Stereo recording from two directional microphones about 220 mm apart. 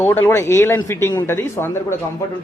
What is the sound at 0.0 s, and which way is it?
A man's voice, 10° left (ahead or behind).